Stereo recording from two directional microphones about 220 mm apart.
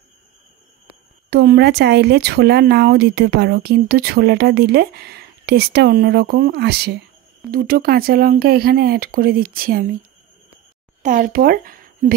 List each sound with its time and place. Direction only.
1.3 s speech: 45° right (ahead or behind)
11.0 s speech: 35° right (ahead or behind)